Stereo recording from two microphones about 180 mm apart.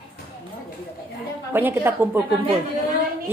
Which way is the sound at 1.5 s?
10° right (ahead or behind).